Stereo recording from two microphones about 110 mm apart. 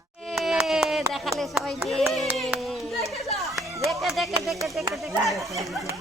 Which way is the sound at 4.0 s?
Centre (ahead or behind).